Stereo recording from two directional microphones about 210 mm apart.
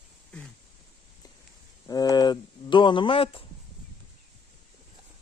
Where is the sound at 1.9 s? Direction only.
20° left (ahead or behind).